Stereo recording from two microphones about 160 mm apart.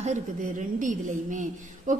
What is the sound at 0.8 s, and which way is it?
A woman's voice, 50° right (ahead or behind).